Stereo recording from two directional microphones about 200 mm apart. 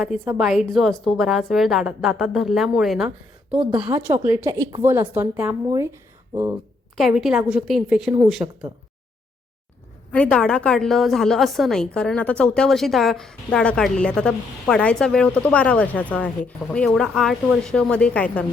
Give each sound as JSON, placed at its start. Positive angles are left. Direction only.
{"t": 0.3, "sound": "a woman's voice", "side_deg": 0}
{"t": 6.9, "sound": "a woman's voice", "side_deg": 0}
{"t": 8.4, "sound": "a woman's voice", "side_deg": -15}
{"t": 10.1, "sound": "a woman's voice", "side_deg": 5}